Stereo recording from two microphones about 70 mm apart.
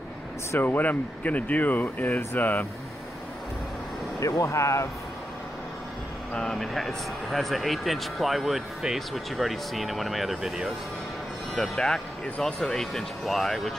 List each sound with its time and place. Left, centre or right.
0.6 s speech: left
4.2 s speech: left
6.3 s speech: centre
11.5 s speech: centre